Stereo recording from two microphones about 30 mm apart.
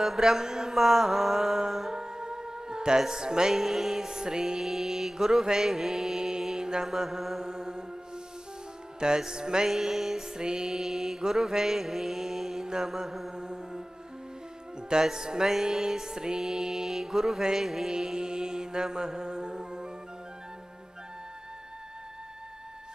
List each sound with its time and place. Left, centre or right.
0.0 s mantra: centre
1.9 s music: right
3.5 s mantra: centre
6.6 s mantra: right
7.0 s mantra: centre
7.4 s music: right
9.0 s music: right
9.6 s mantra: centre
10.3 s music: right
10.8 s mantra: centre
12.6 s mantra: right
13.3 s music: right
16.4 s mantra: centre
17.9 s mantra: right